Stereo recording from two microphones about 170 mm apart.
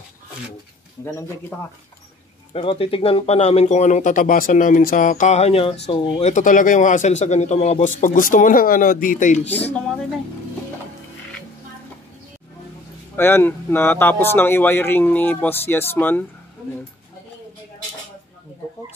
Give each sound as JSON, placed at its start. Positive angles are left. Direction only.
{"t": 1.0, "sound": "speech", "side_deg": 15}
{"t": 2.5, "sound": "speech", "side_deg": 35}
{"t": 6.3, "sound": "a man's voice", "side_deg": 50}
{"t": 13.1, "sound": "speech", "side_deg": 15}